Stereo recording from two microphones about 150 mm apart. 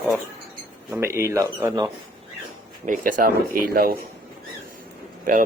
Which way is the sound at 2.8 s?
65° right (ahead or behind).